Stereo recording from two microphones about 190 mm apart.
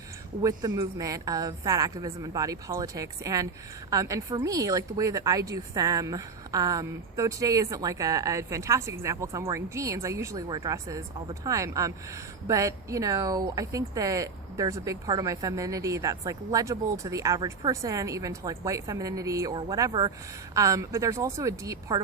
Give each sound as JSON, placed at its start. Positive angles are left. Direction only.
{"t": 0.4, "sound": "a woman's voice", "side_deg": -20}